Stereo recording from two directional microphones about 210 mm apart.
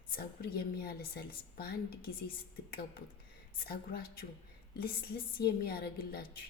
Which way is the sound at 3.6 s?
45° left (ahead or behind).